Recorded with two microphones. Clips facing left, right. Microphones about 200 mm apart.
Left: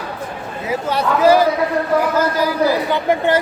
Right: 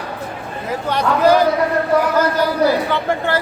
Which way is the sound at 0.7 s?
5° left (ahead or behind).